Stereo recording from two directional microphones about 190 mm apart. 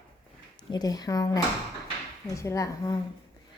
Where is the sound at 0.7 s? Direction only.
20° left (ahead or behind).